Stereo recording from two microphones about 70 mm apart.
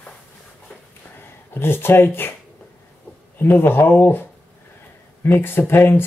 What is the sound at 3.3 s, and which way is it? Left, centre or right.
Speech, left.